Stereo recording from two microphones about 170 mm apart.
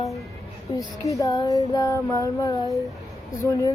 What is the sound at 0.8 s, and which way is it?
Music, 20° left (ahead or behind).